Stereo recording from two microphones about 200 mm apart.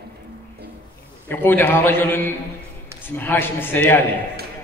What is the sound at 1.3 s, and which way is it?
A man's voice, 10° left (ahead or behind).